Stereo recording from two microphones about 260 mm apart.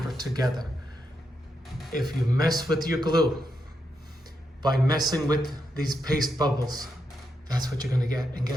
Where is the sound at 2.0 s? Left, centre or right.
Centre.